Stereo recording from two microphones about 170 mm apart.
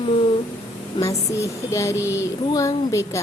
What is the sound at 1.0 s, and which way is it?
A woman's voice, 15° left (ahead or behind).